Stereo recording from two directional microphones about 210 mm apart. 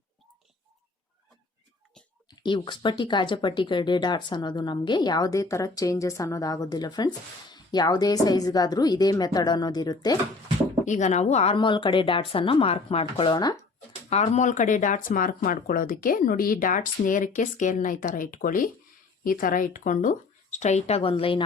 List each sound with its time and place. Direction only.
2.4 s speech: 25° left (ahead or behind)
10.8 s speech: 35° left (ahead or behind)
14.1 s speech: 35° left (ahead or behind)